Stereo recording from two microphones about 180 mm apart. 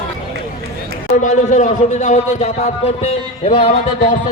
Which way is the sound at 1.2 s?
40° left (ahead or behind).